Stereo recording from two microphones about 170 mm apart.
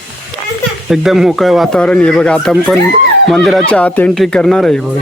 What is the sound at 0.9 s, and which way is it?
Speech, centre (ahead or behind).